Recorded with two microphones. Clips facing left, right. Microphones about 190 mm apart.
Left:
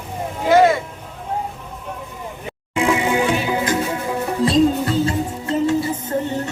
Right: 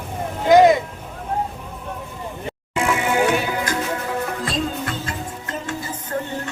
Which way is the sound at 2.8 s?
20° left (ahead or behind).